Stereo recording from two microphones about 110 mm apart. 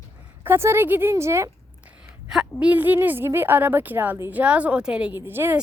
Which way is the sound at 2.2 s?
5° right (ahead or behind).